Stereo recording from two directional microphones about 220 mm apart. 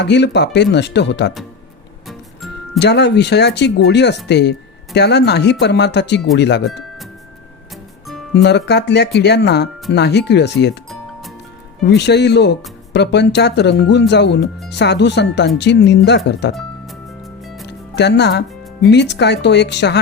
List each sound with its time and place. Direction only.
0.0 s speech: 50° left (ahead or behind)
2.7 s speech: 50° left (ahead or behind)
8.3 s speech: 50° left (ahead or behind)
11.9 s speech: 50° left (ahead or behind)
17.4 s music: centre (ahead or behind)
17.7 s music: 50° left (ahead or behind)
18.9 s speech: 50° left (ahead or behind)